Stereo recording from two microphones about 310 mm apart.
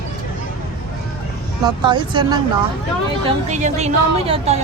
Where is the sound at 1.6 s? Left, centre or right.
Centre.